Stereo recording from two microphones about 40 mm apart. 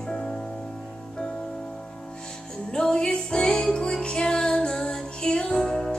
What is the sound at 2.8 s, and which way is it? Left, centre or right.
Music, centre.